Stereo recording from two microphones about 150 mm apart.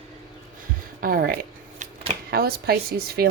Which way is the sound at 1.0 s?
75° right (ahead or behind).